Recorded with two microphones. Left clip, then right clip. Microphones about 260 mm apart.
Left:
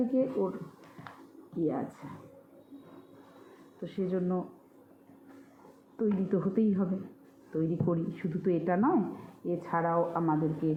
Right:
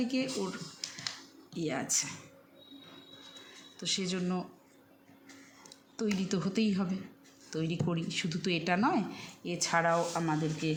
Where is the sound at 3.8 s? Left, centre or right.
Right.